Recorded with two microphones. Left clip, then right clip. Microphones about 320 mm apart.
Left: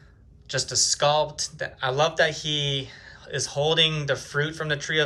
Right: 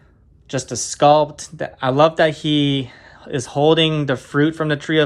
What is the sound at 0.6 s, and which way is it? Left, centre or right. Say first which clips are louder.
Speech: right 8 dB; centre.